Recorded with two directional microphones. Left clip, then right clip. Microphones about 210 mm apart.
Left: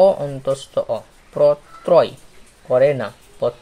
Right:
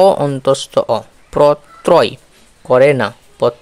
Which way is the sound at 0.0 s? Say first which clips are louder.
Right 4 dB; 45° right (ahead or behind).